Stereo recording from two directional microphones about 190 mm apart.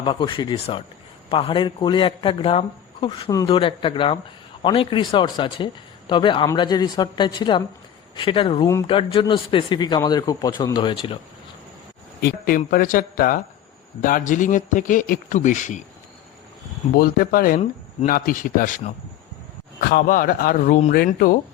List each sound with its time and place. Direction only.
0.0 s a man's voice: 25° left (ahead or behind)
12.2 s speech: 50° left (ahead or behind)
16.9 s speech: 50° left (ahead or behind)